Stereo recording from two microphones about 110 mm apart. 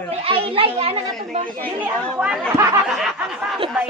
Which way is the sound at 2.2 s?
20° right (ahead or behind).